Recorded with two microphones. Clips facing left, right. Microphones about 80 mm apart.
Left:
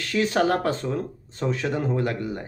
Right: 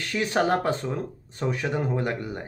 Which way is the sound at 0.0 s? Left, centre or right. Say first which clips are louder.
Left 2 dB; right.